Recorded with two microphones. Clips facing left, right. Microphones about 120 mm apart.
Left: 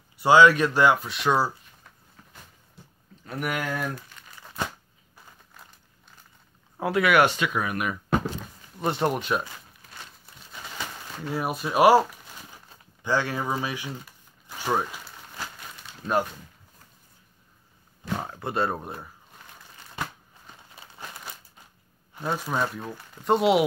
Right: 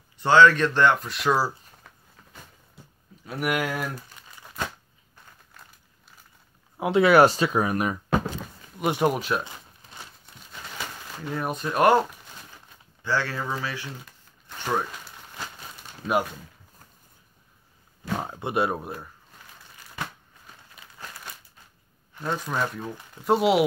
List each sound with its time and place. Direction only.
0.2 s speech: 10° left (ahead or behind)
3.3 s speech: 5° right (ahead or behind)
6.8 s speech: 25° right (ahead or behind)
8.7 s speech: 10° right (ahead or behind)
9.4 s crumpling: 20° right (ahead or behind)
10.2 s crumpling: centre (ahead or behind)
13.0 s speech: 15° left (ahead or behind)
14.5 s a sound: 10° left (ahead or behind)
18.2 s speech: 15° right (ahead or behind)
20.7 s crumpling: 30° left (ahead or behind)
22.2 s speech: 5° left (ahead or behind)